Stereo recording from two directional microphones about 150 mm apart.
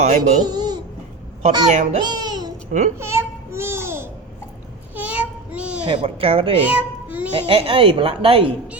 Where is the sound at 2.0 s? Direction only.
30° right (ahead or behind).